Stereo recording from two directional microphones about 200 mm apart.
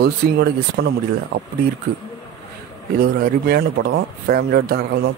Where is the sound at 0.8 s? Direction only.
50° right (ahead or behind).